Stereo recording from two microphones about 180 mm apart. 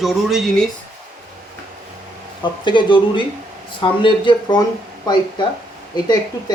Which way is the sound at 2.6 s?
25° left (ahead or behind).